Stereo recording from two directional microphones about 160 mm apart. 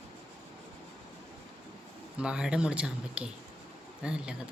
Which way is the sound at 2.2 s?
5° right (ahead or behind).